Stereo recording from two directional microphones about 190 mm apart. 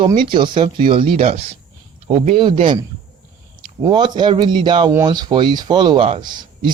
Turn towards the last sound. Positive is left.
turn(degrees=-25)  # may be behind; listen again after turning